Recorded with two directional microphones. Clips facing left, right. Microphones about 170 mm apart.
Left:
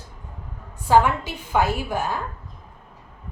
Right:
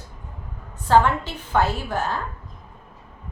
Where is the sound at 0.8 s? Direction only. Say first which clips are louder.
Even; 10° left (ahead or behind).